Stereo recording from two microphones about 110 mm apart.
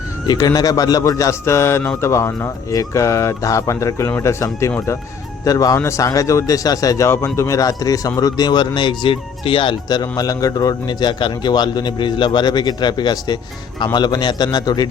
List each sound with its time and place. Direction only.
0.3 s a man's voice: 35° left (ahead or behind)